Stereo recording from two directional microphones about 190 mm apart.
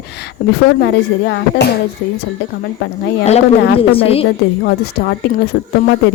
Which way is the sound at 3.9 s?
30° left (ahead or behind).